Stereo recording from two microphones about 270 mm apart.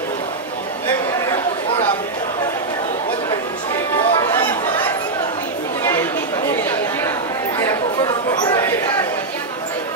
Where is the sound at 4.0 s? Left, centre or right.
Centre.